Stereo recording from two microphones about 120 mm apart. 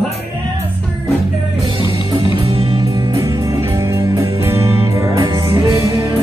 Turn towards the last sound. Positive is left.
turn(degrees=-20)  # may be behind; listen again after turning